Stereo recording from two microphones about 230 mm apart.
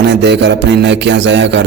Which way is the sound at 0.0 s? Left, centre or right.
Right.